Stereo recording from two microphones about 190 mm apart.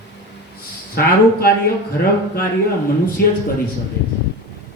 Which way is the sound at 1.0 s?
55° left (ahead or behind).